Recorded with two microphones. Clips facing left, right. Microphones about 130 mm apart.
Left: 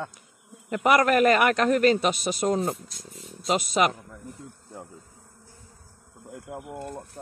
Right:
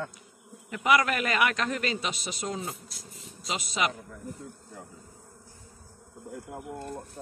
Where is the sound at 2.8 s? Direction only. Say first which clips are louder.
Left 3 dB; centre (ahead or behind).